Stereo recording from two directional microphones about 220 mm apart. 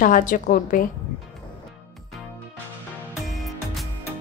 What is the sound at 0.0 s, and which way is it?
Speech, 35° left (ahead or behind).